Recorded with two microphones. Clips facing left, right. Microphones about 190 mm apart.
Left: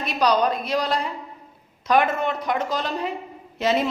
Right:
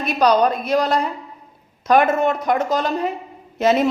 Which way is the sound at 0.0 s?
50° right (ahead or behind).